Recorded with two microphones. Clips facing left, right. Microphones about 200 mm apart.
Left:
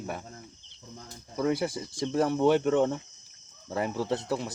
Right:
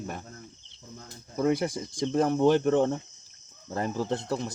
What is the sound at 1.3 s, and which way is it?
Speech, 50° right (ahead or behind).